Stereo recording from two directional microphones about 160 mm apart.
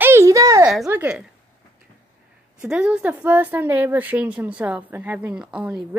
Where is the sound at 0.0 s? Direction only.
15° right (ahead or behind).